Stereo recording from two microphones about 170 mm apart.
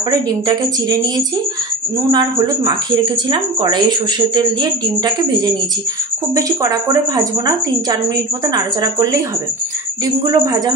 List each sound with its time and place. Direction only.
0.1 s speech: 25° right (ahead or behind)
2.0 s speech: 20° right (ahead or behind)
10.3 s speech: 20° right (ahead or behind)